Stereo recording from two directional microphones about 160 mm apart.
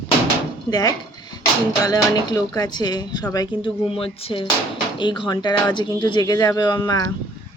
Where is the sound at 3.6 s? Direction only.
35° left (ahead or behind).